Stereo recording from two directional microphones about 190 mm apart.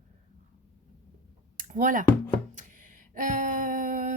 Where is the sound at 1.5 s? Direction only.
45° right (ahead or behind).